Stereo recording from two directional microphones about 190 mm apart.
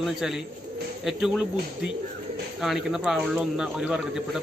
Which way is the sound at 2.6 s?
Centre (ahead or behind).